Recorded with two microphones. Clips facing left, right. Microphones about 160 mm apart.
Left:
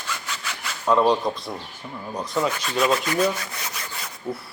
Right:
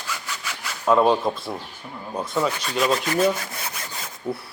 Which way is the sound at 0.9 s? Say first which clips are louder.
Right 1 dB; 5° right (ahead or behind).